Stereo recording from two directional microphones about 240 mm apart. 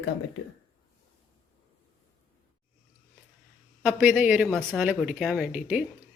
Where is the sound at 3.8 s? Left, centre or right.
Centre.